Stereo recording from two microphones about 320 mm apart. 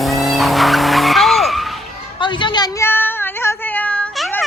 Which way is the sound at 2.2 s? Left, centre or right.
Centre.